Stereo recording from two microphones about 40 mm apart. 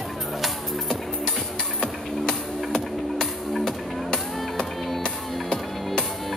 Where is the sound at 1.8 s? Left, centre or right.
Centre.